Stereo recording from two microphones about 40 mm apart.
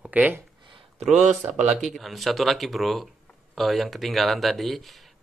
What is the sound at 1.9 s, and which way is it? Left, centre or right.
Speech, centre.